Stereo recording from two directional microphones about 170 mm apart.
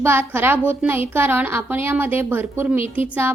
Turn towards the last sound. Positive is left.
turn(degrees=-10)  # may be behind; listen again after turning